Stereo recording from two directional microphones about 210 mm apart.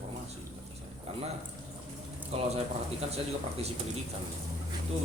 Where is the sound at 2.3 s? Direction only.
30° right (ahead or behind).